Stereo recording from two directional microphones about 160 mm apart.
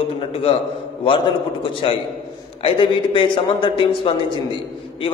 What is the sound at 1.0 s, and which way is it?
A man's voice, 30° left (ahead or behind).